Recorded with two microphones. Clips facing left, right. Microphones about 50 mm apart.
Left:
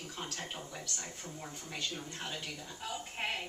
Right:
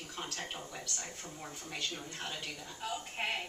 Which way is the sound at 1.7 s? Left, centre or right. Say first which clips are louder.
Even; centre.